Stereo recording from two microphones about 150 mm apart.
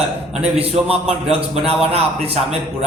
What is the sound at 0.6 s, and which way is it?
A man's voice, 40° right (ahead or behind).